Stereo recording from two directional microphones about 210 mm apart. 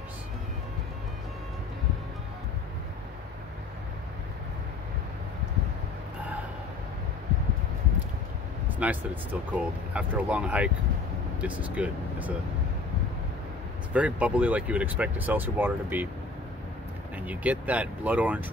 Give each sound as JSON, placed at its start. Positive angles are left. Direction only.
{"t": 8.6, "sound": "speech", "side_deg": -5}
{"t": 13.9, "sound": "speech", "side_deg": -5}
{"t": 17.3, "sound": "speech", "side_deg": -5}